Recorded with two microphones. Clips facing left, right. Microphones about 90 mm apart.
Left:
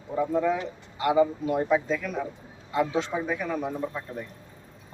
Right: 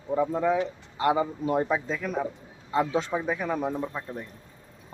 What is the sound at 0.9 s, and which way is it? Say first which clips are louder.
A man's voice: left 2 dB; 35° right (ahead or behind).